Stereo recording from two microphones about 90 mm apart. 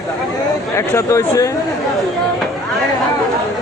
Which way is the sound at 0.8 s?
35° left (ahead or behind).